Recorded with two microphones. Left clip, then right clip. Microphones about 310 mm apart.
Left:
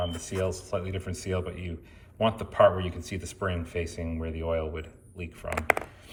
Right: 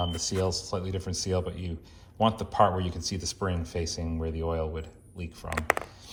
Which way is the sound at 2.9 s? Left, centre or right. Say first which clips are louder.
Right 4 dB; right.